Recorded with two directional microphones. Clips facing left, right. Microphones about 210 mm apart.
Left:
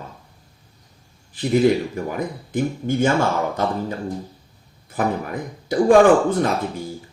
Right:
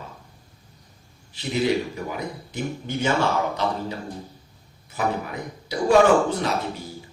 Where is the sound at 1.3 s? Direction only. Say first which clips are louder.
Left 6 dB; 50° left (ahead or behind).